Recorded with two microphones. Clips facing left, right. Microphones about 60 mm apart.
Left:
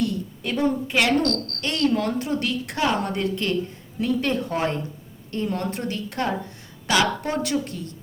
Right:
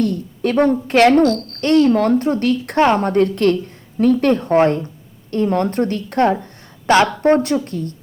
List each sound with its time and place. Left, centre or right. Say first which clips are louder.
0.0 s a woman's voice: right 7 dB; right
1.2 s speech: right 9 dB; centre
1.9 s a woman's voice: right 9 dB; right